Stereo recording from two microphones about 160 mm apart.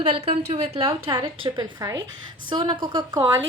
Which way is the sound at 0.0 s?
40° right (ahead or behind).